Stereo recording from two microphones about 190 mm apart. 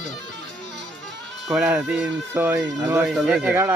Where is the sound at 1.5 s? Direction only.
5° right (ahead or behind).